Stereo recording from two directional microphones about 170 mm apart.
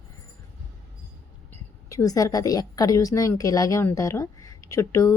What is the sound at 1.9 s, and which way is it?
A woman's voice, 20° left (ahead or behind).